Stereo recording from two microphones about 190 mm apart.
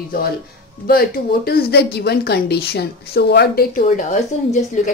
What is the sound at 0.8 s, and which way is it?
Speech, 55° left (ahead or behind).